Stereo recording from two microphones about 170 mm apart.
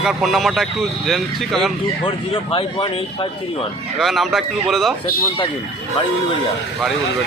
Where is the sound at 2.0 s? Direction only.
30° left (ahead or behind).